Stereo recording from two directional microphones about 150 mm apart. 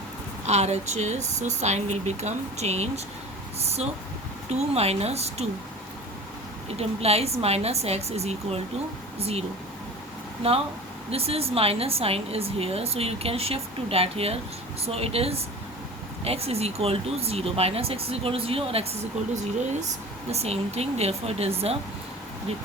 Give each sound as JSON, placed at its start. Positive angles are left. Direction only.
{"t": 0.4, "sound": "speech", "side_deg": -45}
{"t": 6.7, "sound": "speech", "side_deg": -45}
{"t": 11.1, "sound": "a woman's voice", "side_deg": -40}
{"t": 20.3, "sound": "speech", "side_deg": -45}